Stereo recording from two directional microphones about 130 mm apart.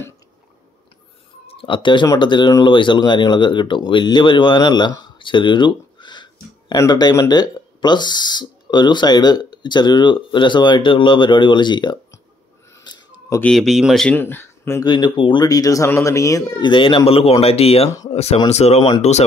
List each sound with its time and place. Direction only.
1.5 s speech: 40° left (ahead or behind)
12.8 s a sound: 35° left (ahead or behind)
13.4 s speech: centre (ahead or behind)
14.0 s speech: 15° left (ahead or behind)
14.9 s speech: 40° left (ahead or behind)
15.4 s speech: 25° left (ahead or behind); by 17.8 s 50° left (ahead or behind)
17.8 s speech: 25° left (ahead or behind)
18.1 s speech: 55° left (ahead or behind)